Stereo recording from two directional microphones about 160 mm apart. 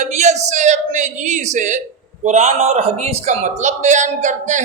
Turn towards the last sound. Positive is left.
turn(degrees=-50)  # may be behind; listen again after turning